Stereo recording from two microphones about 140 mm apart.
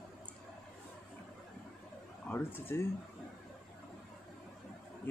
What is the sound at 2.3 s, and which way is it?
Speech, 15° left (ahead or behind).